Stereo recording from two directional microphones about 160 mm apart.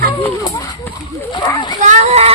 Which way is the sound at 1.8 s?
45° right (ahead or behind).